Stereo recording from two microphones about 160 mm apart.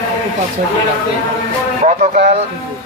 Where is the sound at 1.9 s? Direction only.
45° right (ahead or behind).